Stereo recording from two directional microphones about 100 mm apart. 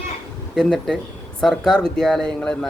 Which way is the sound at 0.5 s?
5° left (ahead or behind).